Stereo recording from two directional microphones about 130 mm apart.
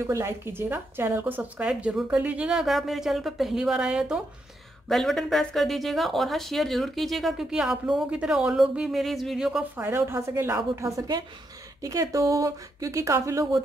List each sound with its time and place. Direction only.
0.0 s a woman's voice: 20° right (ahead or behind); by 9.7 s 5° right (ahead or behind)
9.8 s speech: 15° right (ahead or behind)